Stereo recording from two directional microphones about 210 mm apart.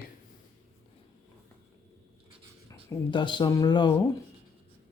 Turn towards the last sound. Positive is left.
turn(degrees=20)  # may be behind; listen again after turning